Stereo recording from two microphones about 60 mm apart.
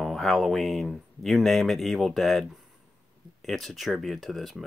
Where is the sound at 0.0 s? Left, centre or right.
Centre.